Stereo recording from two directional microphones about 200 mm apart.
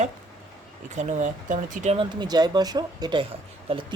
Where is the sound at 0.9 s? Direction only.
35° right (ahead or behind).